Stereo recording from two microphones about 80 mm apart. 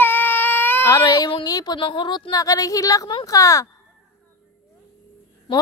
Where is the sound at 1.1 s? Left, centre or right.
Left.